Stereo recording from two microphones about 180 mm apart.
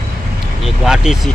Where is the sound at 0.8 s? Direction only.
Centre (ahead or behind).